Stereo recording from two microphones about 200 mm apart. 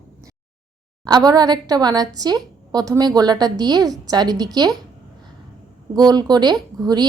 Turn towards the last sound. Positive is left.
turn(degrees=-20)  # may be behind; listen again after turning